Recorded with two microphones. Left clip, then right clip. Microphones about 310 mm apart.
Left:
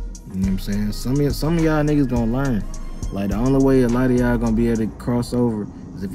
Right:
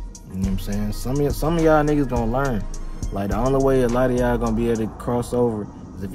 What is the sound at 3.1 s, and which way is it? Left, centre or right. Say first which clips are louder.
Speech: right 1 dB; right.